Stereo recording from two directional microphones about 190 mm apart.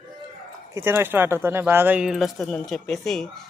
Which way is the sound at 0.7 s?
10° right (ahead or behind).